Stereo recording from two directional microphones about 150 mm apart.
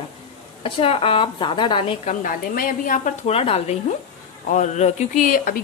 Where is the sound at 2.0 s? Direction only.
65° left (ahead or behind).